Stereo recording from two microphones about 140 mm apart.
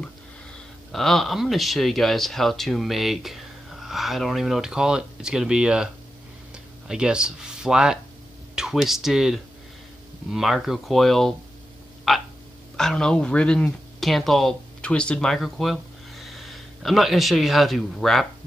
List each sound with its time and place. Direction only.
0.9 s speech: centre (ahead or behind)
12.1 s frog: centre (ahead or behind)
12.7 s speech: 5° left (ahead or behind)